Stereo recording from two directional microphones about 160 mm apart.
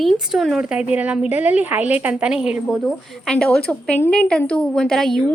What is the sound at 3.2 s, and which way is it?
Speech, 5° left (ahead or behind).